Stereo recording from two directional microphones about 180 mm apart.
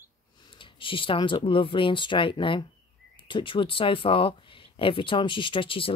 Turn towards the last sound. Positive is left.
turn(degrees=30)  # may be behind; listen again after turning